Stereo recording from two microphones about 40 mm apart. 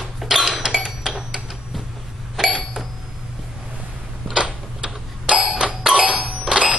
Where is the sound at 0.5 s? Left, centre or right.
Centre.